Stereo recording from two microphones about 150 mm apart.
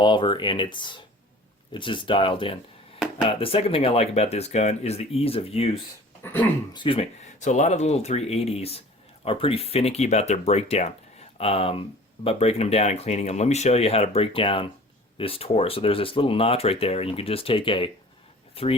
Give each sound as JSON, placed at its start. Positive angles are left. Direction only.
{"t": 0.0, "sound": "speech", "side_deg": 35}
{"t": 6.4, "sound": "speech", "side_deg": 20}
{"t": 6.7, "sound": "speech", "side_deg": 35}
{"t": 7.3, "sound": "speech", "side_deg": 50}